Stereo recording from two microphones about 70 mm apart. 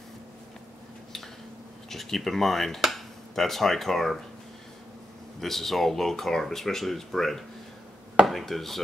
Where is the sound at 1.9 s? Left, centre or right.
Centre.